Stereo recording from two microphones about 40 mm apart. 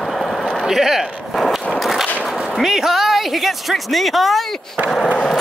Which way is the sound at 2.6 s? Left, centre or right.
Centre.